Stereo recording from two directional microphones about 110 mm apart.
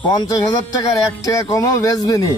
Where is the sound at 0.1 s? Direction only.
35° left (ahead or behind).